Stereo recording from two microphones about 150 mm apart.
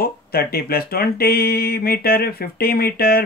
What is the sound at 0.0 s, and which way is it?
Speech, 90° left.